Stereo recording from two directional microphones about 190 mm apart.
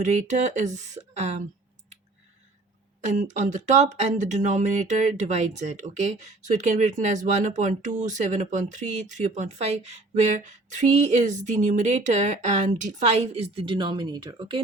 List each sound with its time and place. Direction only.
0.0 s speech: 40° right (ahead or behind)
3.0 s speech: 40° right (ahead or behind)